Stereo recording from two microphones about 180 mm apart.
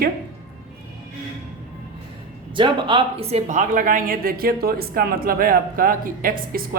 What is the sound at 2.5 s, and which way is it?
Speech, 25° right (ahead or behind).